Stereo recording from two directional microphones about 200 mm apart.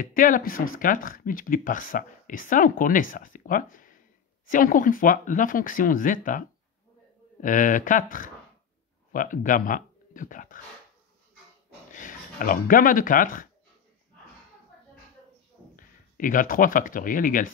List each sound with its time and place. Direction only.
0.0 s speech: 45° left (ahead or behind)
7.4 s speech: 40° left (ahead or behind)
11.9 s speech: 40° left (ahead or behind)
15.7 s speech: 40° left (ahead or behind)